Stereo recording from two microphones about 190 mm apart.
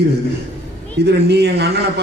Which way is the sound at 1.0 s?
60° right (ahead or behind).